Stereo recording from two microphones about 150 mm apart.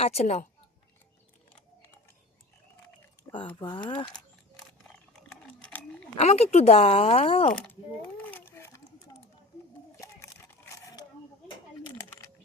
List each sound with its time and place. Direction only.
0.0 s speech: 45° left (ahead or behind)
3.3 s speech: 35° left (ahead or behind)
5.1 s sewing machine: 5° left (ahead or behind)
6.1 s speech: 45° left (ahead or behind)
7.7 s a sound: 10° left (ahead or behind)
10.8 s a sound: 20° left (ahead or behind)